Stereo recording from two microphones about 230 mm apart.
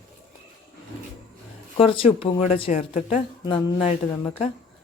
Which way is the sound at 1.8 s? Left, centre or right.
Left.